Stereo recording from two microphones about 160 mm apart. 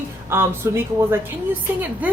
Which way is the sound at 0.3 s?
15° right (ahead or behind).